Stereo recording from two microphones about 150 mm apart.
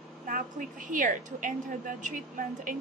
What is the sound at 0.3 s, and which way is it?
A woman's voice, 65° right (ahead or behind).